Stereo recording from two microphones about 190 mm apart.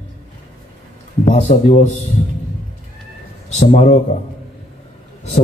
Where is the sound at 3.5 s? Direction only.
35° left (ahead or behind).